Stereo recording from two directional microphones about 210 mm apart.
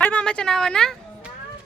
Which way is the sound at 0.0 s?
5° left (ahead or behind).